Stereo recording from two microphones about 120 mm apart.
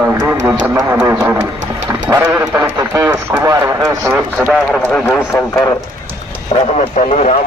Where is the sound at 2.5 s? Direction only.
25° right (ahead or behind).